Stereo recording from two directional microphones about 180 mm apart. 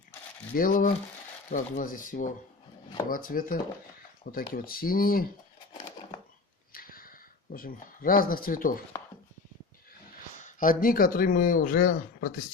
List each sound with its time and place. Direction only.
0.5 s speech: 50° left (ahead or behind)
6.7 s a sound: 55° left (ahead or behind)
10.4 s speech: 50° left (ahead or behind)